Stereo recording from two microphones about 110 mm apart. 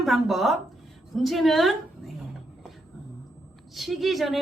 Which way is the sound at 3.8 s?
Centre (ahead or behind).